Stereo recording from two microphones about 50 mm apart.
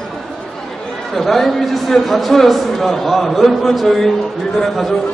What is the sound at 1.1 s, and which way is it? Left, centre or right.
A man's voice, centre.